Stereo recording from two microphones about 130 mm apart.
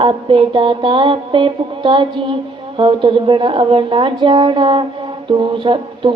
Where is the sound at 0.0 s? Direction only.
40° right (ahead or behind).